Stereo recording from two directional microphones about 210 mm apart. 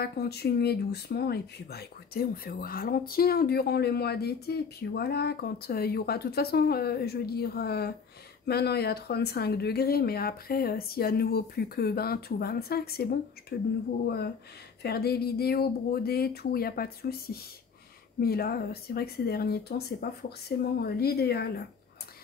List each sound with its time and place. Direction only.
0.0 s speech: 50° left (ahead or behind)
14.8 s speech: 50° left (ahead or behind)